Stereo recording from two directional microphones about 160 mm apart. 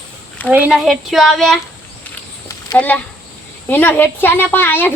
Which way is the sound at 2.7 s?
10° left (ahead or behind).